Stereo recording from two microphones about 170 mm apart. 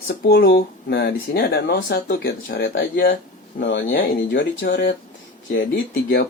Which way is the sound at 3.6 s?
90° left.